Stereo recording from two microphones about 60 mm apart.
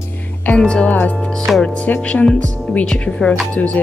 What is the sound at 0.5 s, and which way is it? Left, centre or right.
Music, centre.